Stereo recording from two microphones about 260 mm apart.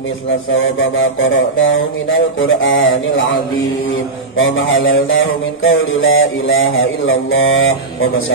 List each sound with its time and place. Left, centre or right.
0.6 s mantra: left
4.4 s mantra: left